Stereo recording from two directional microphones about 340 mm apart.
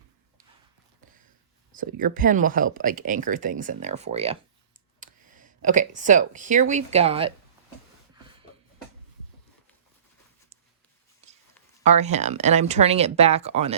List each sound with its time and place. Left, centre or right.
1.7 s speech: right
11.9 s speech: centre